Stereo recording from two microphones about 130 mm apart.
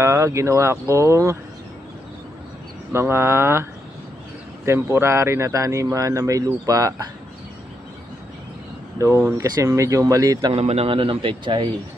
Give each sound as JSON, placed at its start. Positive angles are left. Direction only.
{"t": 0.0, "sound": "speech", "side_deg": -20}
{"t": 2.9, "sound": "speech", "side_deg": -20}
{"t": 4.6, "sound": "speech", "side_deg": -20}
{"t": 8.9, "sound": "speech", "side_deg": -20}
{"t": 10.5, "sound": "a man's voice", "side_deg": -55}